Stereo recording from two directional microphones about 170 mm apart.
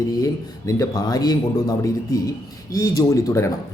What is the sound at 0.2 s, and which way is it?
Speech, 20° left (ahead or behind).